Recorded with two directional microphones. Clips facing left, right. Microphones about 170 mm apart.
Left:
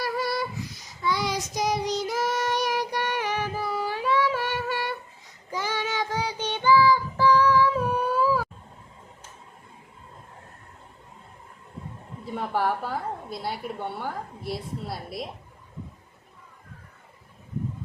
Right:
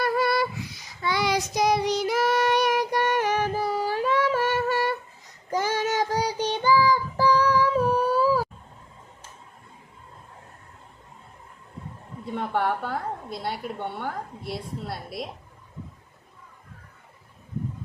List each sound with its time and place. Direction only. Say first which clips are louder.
0.0 s a sound: right 5 dB; 60° right (ahead or behind)
1.0 s child singing: right 2 dB; 65° right (ahead or behind); by 8.4 s 40° right (ahead or behind)
12.2 s a woman's voice: right 1 dB; 5° left (ahead or behind)